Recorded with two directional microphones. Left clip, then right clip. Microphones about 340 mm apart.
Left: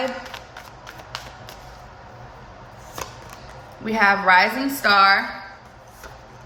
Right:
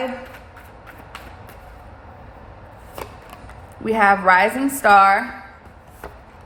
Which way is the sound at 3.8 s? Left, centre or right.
Centre.